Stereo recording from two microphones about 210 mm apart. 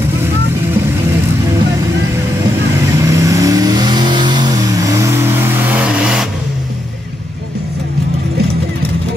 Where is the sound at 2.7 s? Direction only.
15° right (ahead or behind).